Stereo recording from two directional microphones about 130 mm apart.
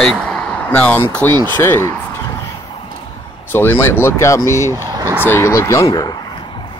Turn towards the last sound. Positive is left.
turn(degrees=30)  # may be behind; listen again after turning